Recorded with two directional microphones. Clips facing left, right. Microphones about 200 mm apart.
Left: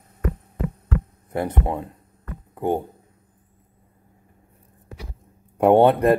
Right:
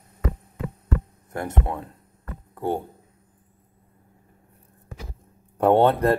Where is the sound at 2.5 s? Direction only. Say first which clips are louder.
Left 3 dB; 15° left (ahead or behind).